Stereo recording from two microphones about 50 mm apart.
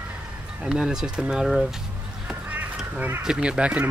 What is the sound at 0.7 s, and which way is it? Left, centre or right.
Speech, centre.